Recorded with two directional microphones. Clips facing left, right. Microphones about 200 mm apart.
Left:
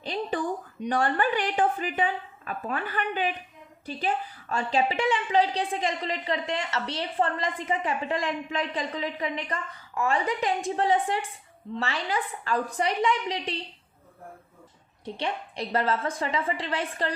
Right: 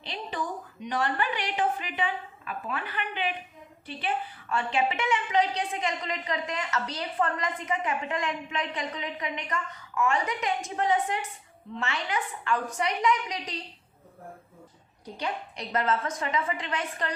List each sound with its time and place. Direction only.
0.0 s a woman's voice: 40° left (ahead or behind)
15.0 s a woman's voice: 30° left (ahead or behind)